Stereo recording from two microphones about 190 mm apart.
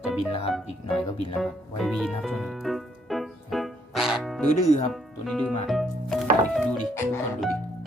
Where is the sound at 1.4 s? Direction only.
Centre (ahead or behind).